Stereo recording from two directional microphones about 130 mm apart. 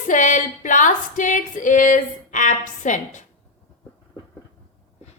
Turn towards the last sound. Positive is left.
turn(degrees=70)  # may be behind; listen again after turning